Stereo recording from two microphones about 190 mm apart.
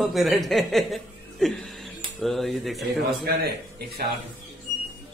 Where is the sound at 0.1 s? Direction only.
Centre (ahead or behind).